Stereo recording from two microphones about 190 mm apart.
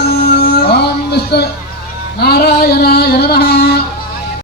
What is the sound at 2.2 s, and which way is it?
Singing, 55° left (ahead or behind).